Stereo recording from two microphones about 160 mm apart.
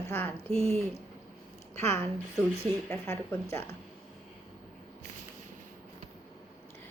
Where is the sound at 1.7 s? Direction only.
15° left (ahead or behind).